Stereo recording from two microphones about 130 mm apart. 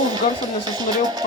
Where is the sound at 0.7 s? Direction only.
30° right (ahead or behind).